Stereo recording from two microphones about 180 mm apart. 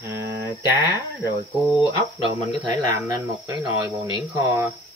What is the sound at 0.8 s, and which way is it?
Speech, 25° left (ahead or behind).